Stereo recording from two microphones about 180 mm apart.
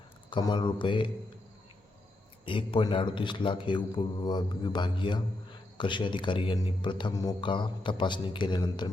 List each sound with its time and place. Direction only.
0.3 s speech: 25° left (ahead or behind)
2.4 s speech: 30° left (ahead or behind)